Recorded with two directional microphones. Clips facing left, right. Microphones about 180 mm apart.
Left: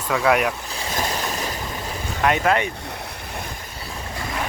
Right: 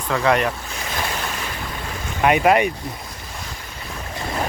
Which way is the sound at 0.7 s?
35° left (ahead or behind).